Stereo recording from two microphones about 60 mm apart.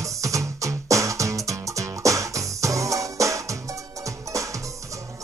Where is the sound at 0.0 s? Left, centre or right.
Right.